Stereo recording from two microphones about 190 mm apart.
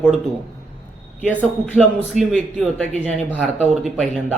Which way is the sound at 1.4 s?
10° right (ahead or behind).